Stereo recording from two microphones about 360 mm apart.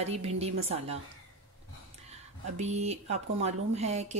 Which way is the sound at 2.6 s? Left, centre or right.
Centre.